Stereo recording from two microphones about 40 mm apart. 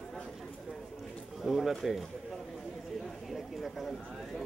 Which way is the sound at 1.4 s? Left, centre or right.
Centre.